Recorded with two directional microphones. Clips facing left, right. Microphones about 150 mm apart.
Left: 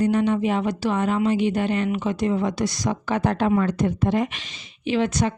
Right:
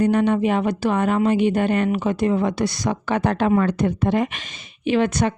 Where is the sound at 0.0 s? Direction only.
60° right (ahead or behind).